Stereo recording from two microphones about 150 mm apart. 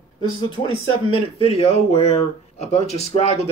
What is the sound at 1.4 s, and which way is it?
Speech, 40° left (ahead or behind).